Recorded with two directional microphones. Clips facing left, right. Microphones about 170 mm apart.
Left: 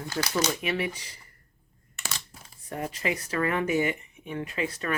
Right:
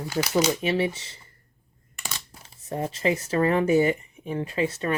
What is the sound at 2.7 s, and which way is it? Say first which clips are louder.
Speech: right 5 dB; 30° right (ahead or behind).